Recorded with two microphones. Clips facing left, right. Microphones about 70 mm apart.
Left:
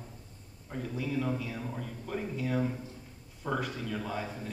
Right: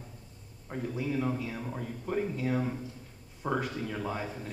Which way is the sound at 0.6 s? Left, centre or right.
Right.